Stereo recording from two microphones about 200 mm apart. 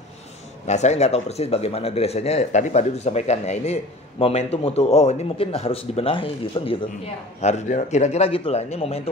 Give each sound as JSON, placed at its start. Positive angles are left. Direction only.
{"t": 0.7, "sound": "speech", "side_deg": 35}